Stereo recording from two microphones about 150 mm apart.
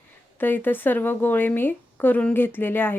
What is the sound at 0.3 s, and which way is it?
Speech, 15° left (ahead or behind).